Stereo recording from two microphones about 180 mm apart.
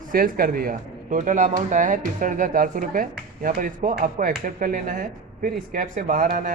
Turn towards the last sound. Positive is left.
turn(degrees=-50)  # may be behind; listen again after turning